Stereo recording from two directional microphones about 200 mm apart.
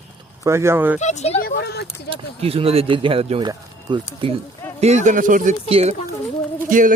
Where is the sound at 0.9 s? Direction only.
35° left (ahead or behind).